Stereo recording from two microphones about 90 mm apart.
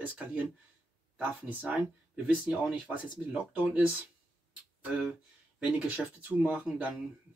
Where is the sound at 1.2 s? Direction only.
20° right (ahead or behind).